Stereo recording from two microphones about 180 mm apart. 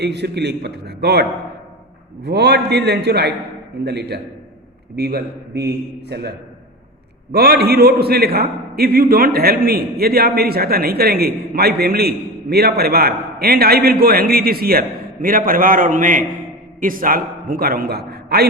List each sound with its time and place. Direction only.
0.0 s a man's voice: 70° right (ahead or behind)
7.3 s a man's voice: 60° right (ahead or behind)